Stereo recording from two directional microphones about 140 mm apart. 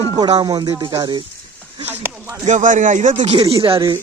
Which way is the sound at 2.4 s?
60° right (ahead or behind).